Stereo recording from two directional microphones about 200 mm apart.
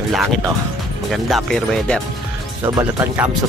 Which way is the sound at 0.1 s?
Centre (ahead or behind).